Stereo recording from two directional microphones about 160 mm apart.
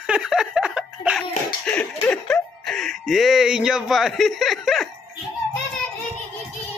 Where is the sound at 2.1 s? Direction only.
5° left (ahead or behind).